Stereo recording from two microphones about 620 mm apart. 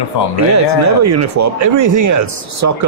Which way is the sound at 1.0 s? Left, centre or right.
Right.